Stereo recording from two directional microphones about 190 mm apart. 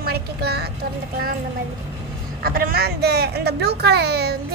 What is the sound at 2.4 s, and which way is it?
A child's voice, 50° right (ahead or behind).